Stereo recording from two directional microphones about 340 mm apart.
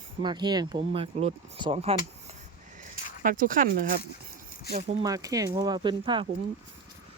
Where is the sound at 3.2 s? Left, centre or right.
Right.